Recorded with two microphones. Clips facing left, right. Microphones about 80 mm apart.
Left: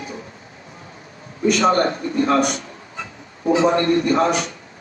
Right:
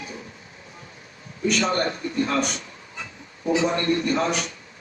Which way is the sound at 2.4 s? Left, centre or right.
Left.